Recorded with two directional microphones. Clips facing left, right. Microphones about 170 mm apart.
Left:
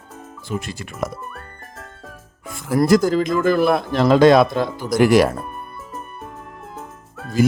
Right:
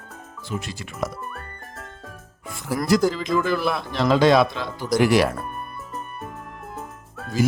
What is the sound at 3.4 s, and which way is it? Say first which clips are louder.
Speech: left 7 dB; 50° left (ahead or behind).